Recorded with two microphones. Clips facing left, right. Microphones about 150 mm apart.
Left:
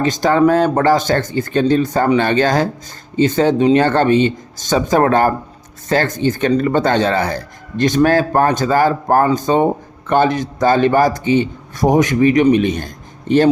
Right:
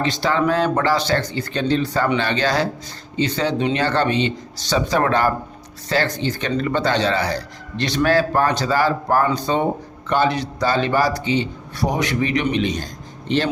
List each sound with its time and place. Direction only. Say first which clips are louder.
0.0 s speech: left 7 dB; 45° left (ahead or behind)